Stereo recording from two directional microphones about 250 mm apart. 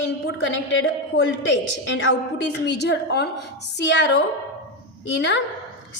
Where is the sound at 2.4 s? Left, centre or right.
Left.